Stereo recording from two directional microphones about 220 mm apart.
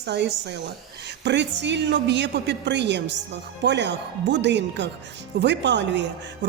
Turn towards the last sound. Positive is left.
turn(degrees=-55)  # may be behind; listen again after turning